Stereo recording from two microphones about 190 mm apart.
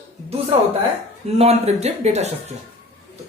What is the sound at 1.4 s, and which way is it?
Speech, 35° right (ahead or behind).